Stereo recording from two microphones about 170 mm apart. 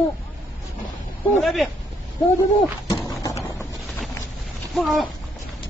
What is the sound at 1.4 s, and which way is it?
Speech, centre (ahead or behind).